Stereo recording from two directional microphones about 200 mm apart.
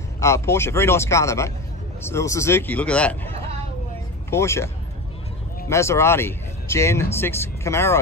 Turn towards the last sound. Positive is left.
turn(degrees=15)  # may be behind; listen again after turning